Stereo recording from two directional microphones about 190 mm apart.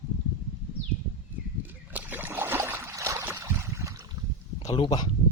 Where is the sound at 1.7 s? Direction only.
10° right (ahead or behind).